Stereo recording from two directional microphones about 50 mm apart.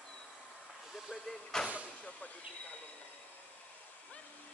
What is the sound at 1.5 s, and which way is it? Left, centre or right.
Vehicle, centre.